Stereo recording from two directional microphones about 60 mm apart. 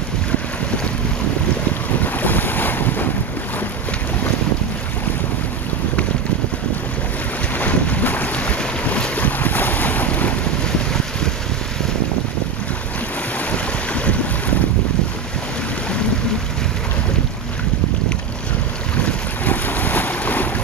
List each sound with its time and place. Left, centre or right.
2.1 s boat: left
7.5 s boat: left
13.5 s boat: left
19.0 s boat: left